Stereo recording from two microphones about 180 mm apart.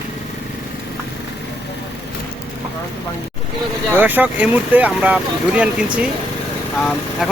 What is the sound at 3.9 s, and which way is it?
Speech, 10° right (ahead or behind).